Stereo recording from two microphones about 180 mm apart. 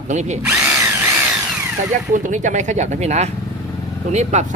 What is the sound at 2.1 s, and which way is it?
Speech, 45° right (ahead or behind).